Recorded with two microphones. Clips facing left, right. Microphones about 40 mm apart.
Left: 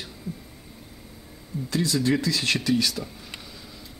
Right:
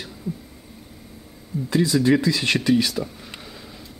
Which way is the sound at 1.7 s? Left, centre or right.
Centre.